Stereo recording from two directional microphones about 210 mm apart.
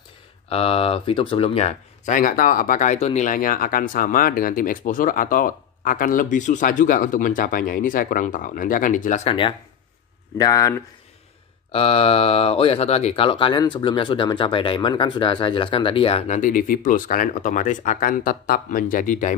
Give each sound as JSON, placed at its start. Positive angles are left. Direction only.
{"t": 0.5, "sound": "speech", "side_deg": 25}
{"t": 11.7, "sound": "speech", "side_deg": 25}